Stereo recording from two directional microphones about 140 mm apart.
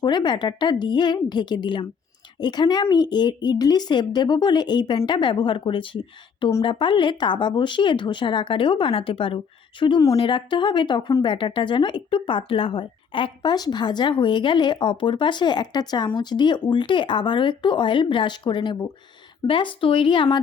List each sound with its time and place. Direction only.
0.0 s speech: 30° left (ahead or behind)